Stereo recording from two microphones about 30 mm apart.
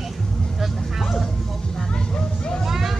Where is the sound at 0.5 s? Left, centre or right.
Centre.